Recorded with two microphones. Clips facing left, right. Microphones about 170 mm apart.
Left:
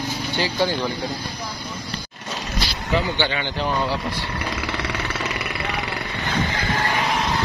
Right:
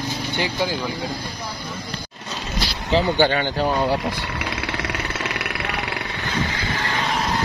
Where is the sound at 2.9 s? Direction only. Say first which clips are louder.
Right 5 dB; 40° right (ahead or behind).